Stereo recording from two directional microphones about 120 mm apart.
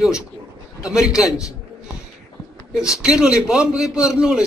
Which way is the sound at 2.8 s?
5° right (ahead or behind).